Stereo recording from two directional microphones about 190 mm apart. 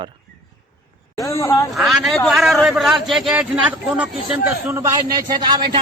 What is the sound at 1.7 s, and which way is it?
A man's voice, centre (ahead or behind).